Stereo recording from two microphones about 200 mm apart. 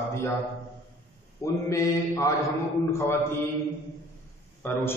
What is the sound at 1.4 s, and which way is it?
A man's voice, 15° left (ahead or behind).